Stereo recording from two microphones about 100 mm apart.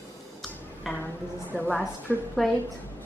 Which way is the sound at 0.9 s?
20° left (ahead or behind).